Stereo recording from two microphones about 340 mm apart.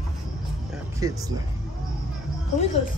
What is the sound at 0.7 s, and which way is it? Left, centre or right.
Music, centre.